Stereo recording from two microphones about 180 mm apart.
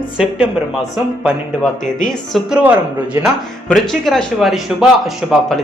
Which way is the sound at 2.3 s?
5° right (ahead or behind).